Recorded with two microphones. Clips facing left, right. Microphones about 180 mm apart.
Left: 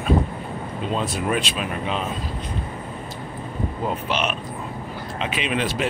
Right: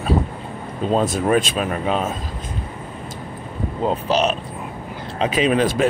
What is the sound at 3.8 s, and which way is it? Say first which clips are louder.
Speech: right 7 dB; 35° right (ahead or behind).